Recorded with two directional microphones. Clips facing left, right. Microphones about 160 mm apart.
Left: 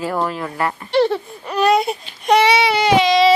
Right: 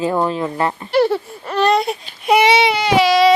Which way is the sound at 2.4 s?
20° right (ahead or behind).